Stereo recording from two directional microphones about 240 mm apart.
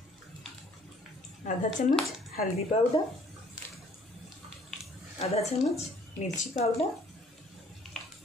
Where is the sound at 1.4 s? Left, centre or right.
Left.